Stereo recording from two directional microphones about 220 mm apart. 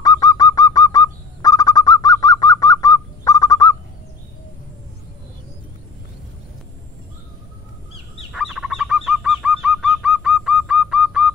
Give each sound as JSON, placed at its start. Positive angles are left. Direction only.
{"t": 0.0, "sound": "bird", "side_deg": 15}
{"t": 8.3, "sound": "bird", "side_deg": 0}